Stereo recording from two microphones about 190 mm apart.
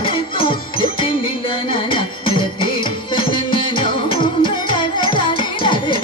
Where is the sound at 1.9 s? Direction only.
25° left (ahead or behind).